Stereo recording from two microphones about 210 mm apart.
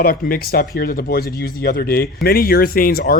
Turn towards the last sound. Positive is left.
turn(degrees=45)  # may be behind; listen again after turning